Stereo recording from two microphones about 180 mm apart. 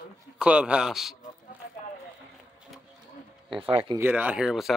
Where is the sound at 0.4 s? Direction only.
5° right (ahead or behind).